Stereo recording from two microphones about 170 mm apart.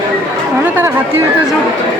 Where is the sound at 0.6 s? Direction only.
10° right (ahead or behind).